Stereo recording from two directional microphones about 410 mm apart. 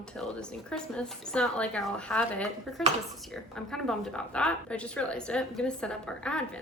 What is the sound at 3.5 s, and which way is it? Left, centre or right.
Speech, centre.